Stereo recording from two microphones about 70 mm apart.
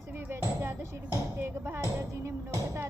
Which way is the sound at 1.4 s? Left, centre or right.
Right.